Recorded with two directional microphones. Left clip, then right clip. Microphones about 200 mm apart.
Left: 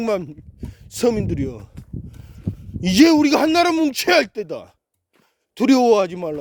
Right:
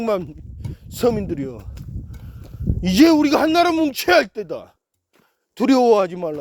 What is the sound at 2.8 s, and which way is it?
A man's voice, 30° left (ahead or behind).